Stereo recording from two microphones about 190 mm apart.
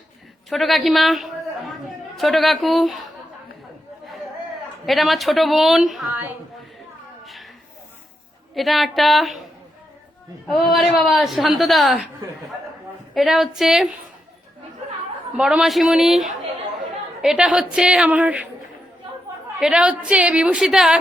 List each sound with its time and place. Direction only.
0.5 s a woman's voice: centre (ahead or behind)
4.9 s a woman's voice: centre (ahead or behind)
8.5 s a woman's voice: centre (ahead or behind)
10.4 s a woman's voice: centre (ahead or behind)
13.1 s a woman's voice: centre (ahead or behind)
15.4 s a woman's voice: 5° right (ahead or behind)
19.5 s a woman's voice: 5° right (ahead or behind)